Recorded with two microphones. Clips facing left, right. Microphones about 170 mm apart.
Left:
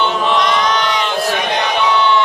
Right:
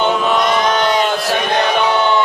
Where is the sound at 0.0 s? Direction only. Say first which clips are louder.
Right 1 dB; 45° right (ahead or behind).